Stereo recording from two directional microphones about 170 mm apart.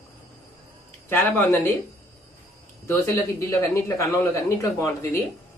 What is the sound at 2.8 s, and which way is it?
Speech, 15° left (ahead or behind).